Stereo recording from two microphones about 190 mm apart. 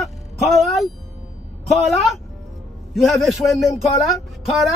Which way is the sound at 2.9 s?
Centre (ahead or behind).